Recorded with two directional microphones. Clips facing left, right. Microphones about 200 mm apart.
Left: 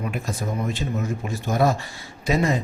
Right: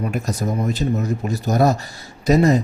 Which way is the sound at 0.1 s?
40° right (ahead or behind).